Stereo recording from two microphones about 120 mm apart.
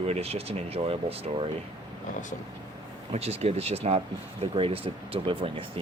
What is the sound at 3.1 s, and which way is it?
Speech, 60° right (ahead or behind).